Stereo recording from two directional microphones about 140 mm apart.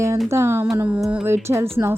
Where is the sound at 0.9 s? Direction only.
Centre (ahead or behind).